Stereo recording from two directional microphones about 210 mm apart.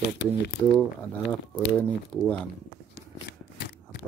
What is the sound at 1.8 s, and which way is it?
Speech, 5° left (ahead or behind).